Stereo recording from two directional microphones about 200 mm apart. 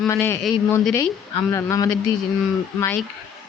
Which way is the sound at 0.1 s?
10° left (ahead or behind).